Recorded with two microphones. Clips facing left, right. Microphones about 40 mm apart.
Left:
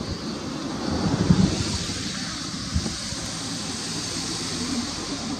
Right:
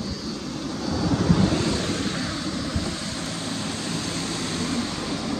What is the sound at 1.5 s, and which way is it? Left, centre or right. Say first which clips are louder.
Vehicle: right 4 dB; right.